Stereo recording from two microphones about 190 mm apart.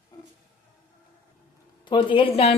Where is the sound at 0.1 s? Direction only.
20° left (ahead or behind).